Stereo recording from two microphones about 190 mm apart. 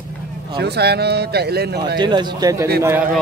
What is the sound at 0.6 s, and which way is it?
Speech, 60° right (ahead or behind).